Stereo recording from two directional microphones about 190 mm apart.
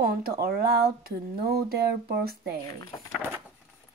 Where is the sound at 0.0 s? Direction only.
50° right (ahead or behind).